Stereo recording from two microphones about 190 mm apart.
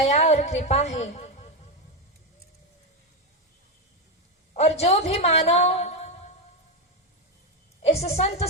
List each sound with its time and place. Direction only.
0.0 s a woman's voice: 35° left (ahead or behind)
4.5 s a woman's voice: 35° left (ahead or behind)
7.8 s a woman's voice: 35° left (ahead or behind)